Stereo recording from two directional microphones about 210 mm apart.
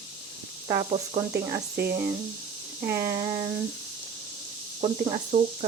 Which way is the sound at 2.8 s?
15° right (ahead or behind).